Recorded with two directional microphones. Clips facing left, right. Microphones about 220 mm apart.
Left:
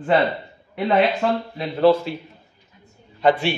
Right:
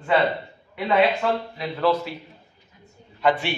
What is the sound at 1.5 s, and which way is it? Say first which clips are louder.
Speech: left 9 dB; 30° left (ahead or behind).